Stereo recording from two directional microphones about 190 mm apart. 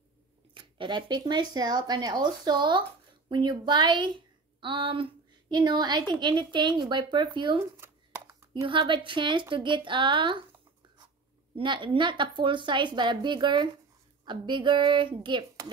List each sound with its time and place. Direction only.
0.6 s a woman's voice: 25° right (ahead or behind)
7.7 s a sound: 15° right (ahead or behind)
8.6 s a woman's voice: 25° right (ahead or behind)
11.5 s a woman's voice: 25° right (ahead or behind)